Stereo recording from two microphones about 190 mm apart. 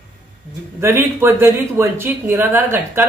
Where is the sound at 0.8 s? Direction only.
10° right (ahead or behind).